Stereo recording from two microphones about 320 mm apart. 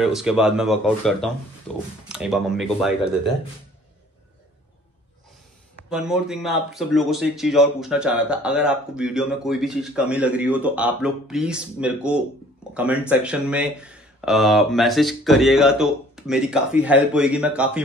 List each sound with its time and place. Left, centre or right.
0.0 s speech: centre
5.9 s speech: centre